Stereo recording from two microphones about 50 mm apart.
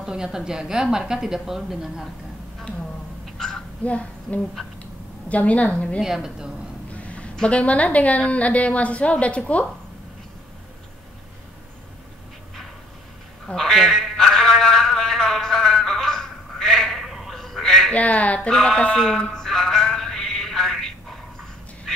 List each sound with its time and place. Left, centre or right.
0.0 s a woman's voice: centre
3.3 s a sound: centre
3.8 s a woman's voice: left
4.6 s speech: centre
5.3 s a woman's voice: left
5.9 s a woman's voice: centre
7.0 s a sound: left
7.3 s a woman's voice: left
13.5 s speech: centre
14.1 s a sound: centre
16.6 s bleat: centre
17.9 s a woman's voice: left
18.5 s speech: centre
19.2 s a sound: centre